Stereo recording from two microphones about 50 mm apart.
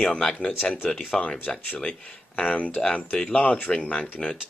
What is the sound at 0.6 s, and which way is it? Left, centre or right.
Speech, left.